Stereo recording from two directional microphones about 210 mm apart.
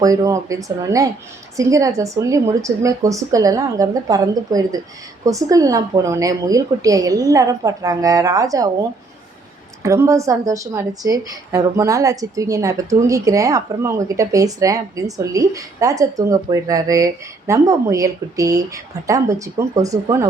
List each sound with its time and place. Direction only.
0.0 s a woman's voice: 15° right (ahead or behind)